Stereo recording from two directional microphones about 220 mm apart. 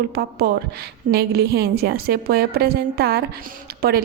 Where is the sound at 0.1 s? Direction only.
45° right (ahead or behind).